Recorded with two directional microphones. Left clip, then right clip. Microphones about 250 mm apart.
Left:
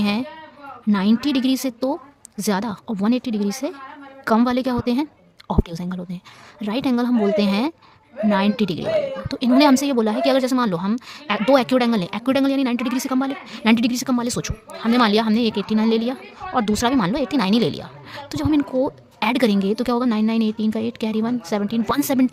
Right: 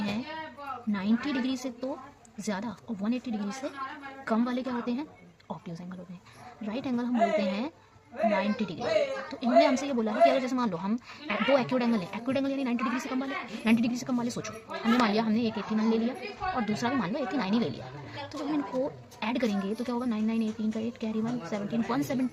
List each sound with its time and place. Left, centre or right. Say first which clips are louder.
0.9 s a woman's voice: left 11 dB; left